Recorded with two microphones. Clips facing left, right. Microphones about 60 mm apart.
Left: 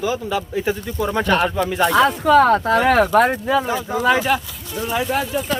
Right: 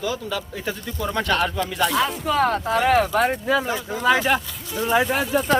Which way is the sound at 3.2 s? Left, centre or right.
Centre.